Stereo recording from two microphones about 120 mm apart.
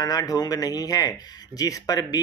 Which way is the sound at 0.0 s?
30° left (ahead or behind).